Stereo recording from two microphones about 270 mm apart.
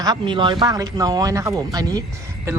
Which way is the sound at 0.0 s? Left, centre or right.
Centre.